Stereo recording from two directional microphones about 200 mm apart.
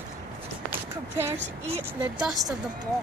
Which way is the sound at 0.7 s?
10° right (ahead or behind).